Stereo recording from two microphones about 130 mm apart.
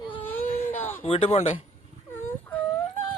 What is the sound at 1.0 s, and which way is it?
Speech, 45° left (ahead or behind).